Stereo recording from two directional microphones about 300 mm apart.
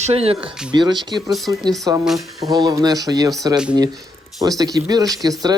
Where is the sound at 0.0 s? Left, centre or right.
Centre.